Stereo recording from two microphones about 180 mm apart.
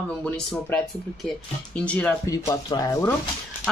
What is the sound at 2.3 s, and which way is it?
Speech, 20° left (ahead or behind).